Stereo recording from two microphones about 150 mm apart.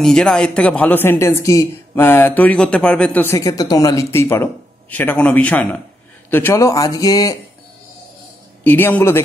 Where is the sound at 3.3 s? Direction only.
25° left (ahead or behind).